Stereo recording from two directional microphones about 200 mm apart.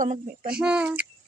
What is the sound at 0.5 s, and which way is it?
Speech, 5° right (ahead or behind).